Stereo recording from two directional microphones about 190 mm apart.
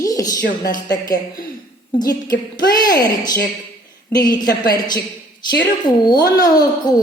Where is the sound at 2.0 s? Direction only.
20° left (ahead or behind).